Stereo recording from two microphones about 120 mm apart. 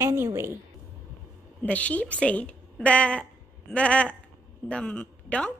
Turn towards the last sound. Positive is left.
turn(degrees=10)  # may be behind; listen again after turning